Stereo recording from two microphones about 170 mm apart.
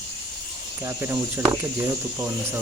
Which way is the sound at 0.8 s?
15° right (ahead or behind).